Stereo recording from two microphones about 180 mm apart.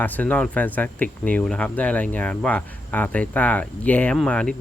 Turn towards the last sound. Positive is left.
turn(degrees=5)  # may be behind; listen again after turning